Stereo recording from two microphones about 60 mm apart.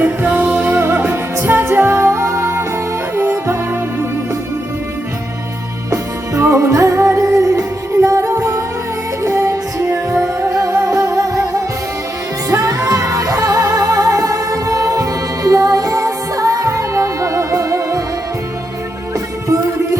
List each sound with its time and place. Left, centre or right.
0.0 s music: right
5.9 s music: right
12.5 s music: right